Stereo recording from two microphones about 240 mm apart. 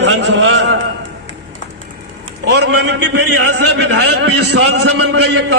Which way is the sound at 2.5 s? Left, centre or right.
Right.